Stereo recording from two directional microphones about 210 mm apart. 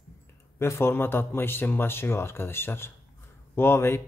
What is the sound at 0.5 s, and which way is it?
Speech, 10° left (ahead or behind).